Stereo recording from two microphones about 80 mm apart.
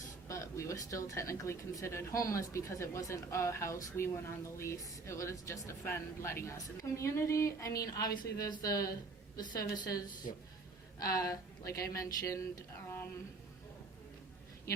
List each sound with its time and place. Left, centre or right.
0.3 s speech: left
7.9 s speech: left
9.4 s a woman's voice: left